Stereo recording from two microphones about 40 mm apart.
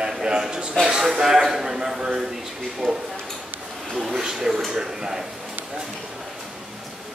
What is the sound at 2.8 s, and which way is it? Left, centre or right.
Speech, centre.